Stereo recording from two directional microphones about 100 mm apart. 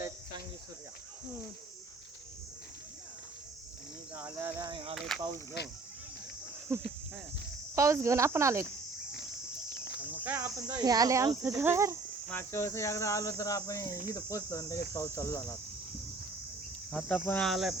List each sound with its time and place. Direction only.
4.4 s speech: 25° right (ahead or behind)
4.6 s speech: 55° right (ahead or behind)
4.9 s cricket: 5° left (ahead or behind)
6.7 s speech: 25° right (ahead or behind)
10.3 s speech: 35° right (ahead or behind)
12.3 s speech: 25° left (ahead or behind)
17.1 s speech: 15° left (ahead or behind)
17.5 s cricket: 5° right (ahead or behind)